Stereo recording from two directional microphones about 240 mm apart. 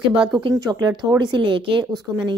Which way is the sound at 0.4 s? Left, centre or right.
Centre.